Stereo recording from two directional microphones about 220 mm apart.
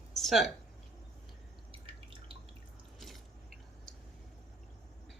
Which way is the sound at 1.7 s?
25° right (ahead or behind).